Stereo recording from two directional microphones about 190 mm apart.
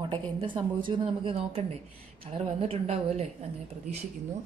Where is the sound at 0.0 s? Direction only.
25° right (ahead or behind).